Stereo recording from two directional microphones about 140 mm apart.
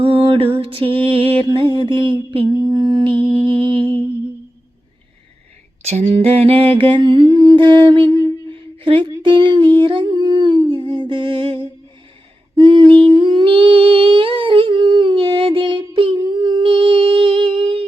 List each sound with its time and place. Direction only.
0.0 s mantra: 40° right (ahead or behind)
1.5 s humming: 35° right (ahead or behind)
2.6 s a sound: 25° right (ahead or behind)
3.1 s humming: 15° left (ahead or behind)
5.8 s humming: 50° right (ahead or behind)
8.4 s a sound: 35° right (ahead or behind)
12.5 s humming: 35° right (ahead or behind)